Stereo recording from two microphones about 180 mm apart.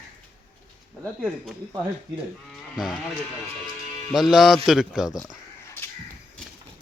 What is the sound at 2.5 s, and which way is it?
Sheep, centre (ahead or behind).